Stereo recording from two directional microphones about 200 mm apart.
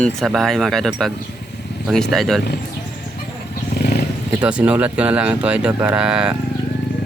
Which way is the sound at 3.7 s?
50° left (ahead or behind).